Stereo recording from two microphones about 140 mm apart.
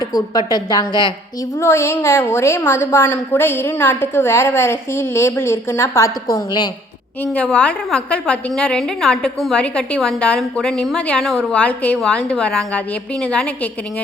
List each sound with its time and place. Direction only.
0.0 s a woman's voice: 25° left (ahead or behind)
1.5 s a woman's voice: 20° left (ahead or behind)
6.3 s a woman's voice: 30° left (ahead or behind)
7.3 s a woman's voice: 10° left (ahead or behind)